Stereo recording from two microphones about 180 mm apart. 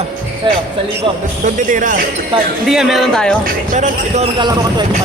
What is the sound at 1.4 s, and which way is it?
Speech, 45° right (ahead or behind).